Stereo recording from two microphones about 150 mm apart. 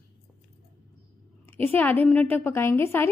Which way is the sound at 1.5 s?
10° left (ahead or behind).